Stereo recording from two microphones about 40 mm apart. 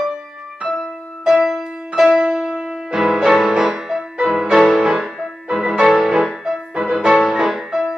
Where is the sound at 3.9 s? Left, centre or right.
Centre.